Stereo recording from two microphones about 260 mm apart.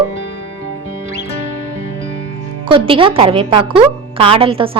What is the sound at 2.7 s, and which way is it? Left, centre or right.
A woman's voice, centre.